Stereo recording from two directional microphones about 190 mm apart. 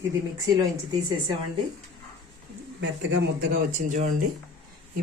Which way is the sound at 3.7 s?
45° right (ahead or behind).